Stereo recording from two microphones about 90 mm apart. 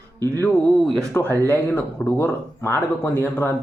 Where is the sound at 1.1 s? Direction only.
25° left (ahead or behind).